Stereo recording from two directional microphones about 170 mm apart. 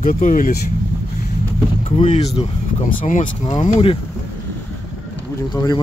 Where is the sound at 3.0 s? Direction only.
50° left (ahead or behind).